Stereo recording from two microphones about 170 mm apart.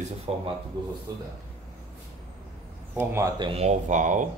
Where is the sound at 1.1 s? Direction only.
20° right (ahead or behind).